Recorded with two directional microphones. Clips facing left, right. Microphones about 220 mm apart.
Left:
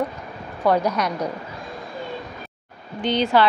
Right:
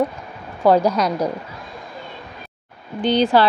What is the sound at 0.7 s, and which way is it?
Speech, 30° right (ahead or behind).